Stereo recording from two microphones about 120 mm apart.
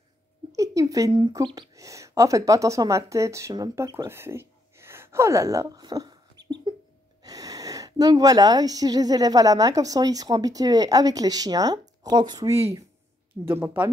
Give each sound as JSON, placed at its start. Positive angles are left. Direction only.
{"t": 0.5, "sound": "speech", "side_deg": -30}
{"t": 13.5, "sound": "speech", "side_deg": -20}